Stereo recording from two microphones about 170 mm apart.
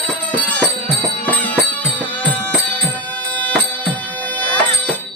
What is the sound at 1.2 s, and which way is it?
Music, 10° left (ahead or behind).